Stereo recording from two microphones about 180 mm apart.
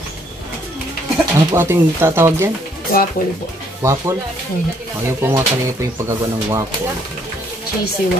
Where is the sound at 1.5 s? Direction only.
15° right (ahead or behind).